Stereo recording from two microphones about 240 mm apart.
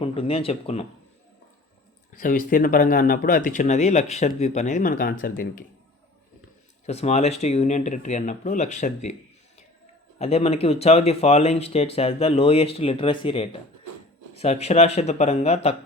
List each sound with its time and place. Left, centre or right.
0.0 s speech: left
2.2 s speech: left
6.8 s speech: left
10.2 s speech: left